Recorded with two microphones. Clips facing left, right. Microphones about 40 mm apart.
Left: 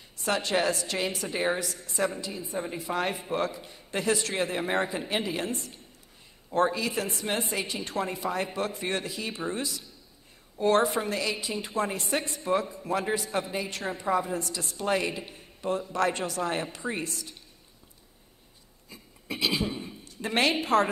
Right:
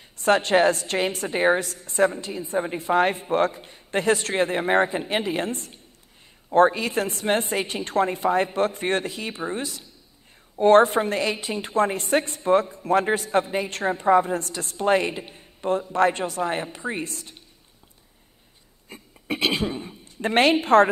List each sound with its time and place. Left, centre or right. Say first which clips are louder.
0.2 s a man's voice: right 8 dB; right
14.8 s speech: right 7 dB; right
17.0 s a man's voice: right 3 dB; right
18.9 s a sound: right 8 dB; right
19.9 s a woman's voice: right 7 dB; right